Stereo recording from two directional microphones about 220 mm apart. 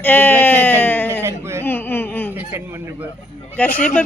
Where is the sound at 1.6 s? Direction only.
10° left (ahead or behind).